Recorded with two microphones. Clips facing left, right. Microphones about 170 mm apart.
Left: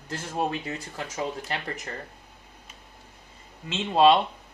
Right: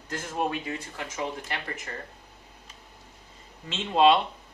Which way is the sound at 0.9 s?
40° left (ahead or behind).